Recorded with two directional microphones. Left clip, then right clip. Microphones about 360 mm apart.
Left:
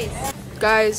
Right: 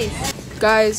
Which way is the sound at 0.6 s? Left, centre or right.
Centre.